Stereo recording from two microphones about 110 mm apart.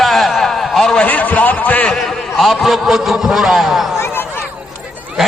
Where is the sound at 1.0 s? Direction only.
15° left (ahead or behind).